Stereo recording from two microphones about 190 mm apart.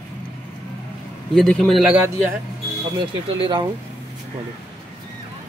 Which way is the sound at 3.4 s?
25° right (ahead or behind).